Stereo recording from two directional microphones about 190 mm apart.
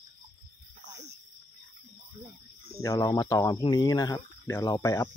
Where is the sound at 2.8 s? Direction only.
20° left (ahead or behind).